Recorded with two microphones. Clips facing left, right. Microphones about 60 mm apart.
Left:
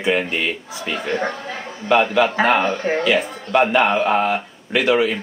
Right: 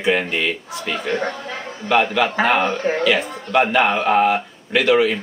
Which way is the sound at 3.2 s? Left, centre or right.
Right.